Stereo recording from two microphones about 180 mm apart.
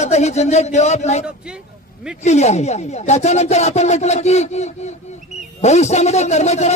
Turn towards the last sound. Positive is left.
turn(degrees=40)  # may be behind; listen again after turning